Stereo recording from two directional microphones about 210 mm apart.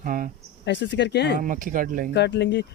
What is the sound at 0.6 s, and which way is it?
Speech, 55° left (ahead or behind).